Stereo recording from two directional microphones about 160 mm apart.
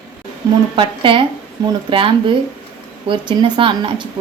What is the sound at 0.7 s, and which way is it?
A woman's voice, 30° right (ahead or behind).